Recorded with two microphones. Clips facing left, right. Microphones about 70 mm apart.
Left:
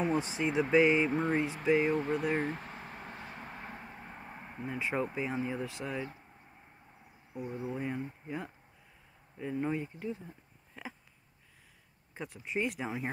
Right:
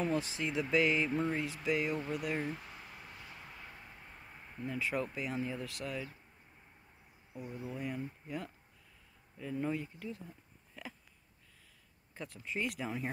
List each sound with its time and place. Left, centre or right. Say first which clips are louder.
0.0 s speech: left 3 dB; left
2.4 s a sound: left 4 dB; left
4.6 s speech: left 2 dB; left
7.4 s speech: left 4 dB; left
12.1 s speech: left 4 dB; centre